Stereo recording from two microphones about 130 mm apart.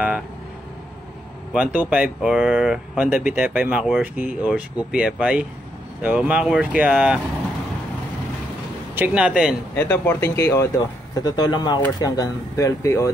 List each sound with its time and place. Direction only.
1.5 s speech: 10° right (ahead or behind)
8.9 s speech: 10° right (ahead or behind)
9.8 s speech: 20° left (ahead or behind)
10.8 s speech: 30° left (ahead or behind)